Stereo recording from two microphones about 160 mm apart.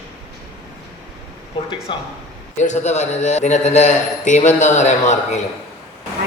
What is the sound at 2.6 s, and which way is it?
A man's voice, 45° left (ahead or behind).